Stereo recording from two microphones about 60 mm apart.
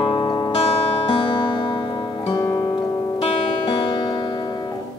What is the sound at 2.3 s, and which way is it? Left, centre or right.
Music, left.